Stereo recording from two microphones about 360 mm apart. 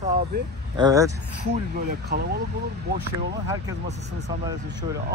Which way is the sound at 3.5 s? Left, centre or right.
Centre.